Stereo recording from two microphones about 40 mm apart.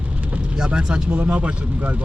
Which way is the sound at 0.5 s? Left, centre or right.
Centre.